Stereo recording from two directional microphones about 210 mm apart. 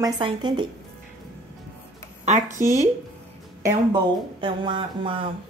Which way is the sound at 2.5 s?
35° right (ahead or behind).